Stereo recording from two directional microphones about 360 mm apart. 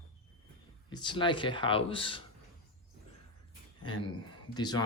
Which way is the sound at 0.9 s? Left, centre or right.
Centre.